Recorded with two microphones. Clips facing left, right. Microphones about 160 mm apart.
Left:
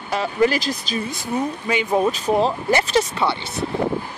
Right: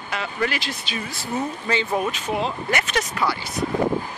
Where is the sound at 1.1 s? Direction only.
15° left (ahead or behind).